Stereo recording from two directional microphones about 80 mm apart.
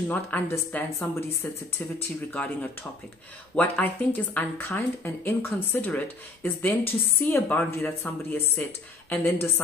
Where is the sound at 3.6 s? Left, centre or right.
Left.